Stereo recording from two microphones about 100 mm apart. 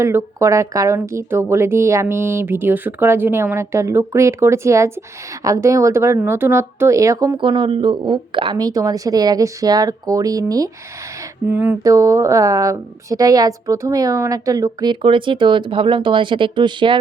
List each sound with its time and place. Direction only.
0.0 s a woman's voice: 25° right (ahead or behind)
7.3 s speech: 55° right (ahead or behind)
8.5 s a woman's voice: 40° right (ahead or behind)
11.4 s speech: 20° right (ahead or behind)
11.8 s a woman's voice: 35° right (ahead or behind)
15.0 s speech: 55° right (ahead or behind)